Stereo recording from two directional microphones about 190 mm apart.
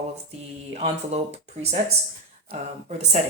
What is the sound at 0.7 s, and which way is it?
Speech, 35° right (ahead or behind).